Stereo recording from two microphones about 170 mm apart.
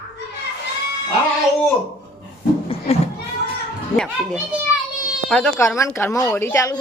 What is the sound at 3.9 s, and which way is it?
Speech, 5° left (ahead or behind).